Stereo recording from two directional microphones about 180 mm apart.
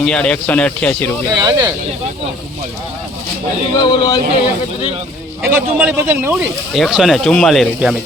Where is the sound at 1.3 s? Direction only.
20° right (ahead or behind).